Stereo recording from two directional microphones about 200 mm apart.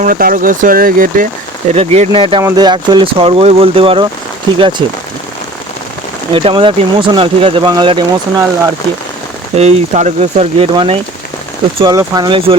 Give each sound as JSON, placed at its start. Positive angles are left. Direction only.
{"t": 0.0, "sound": "speech", "side_deg": -45}
{"t": 1.7, "sound": "speech", "side_deg": -30}
{"t": 6.3, "sound": "speech", "side_deg": -25}
{"t": 9.6, "sound": "speech", "side_deg": -35}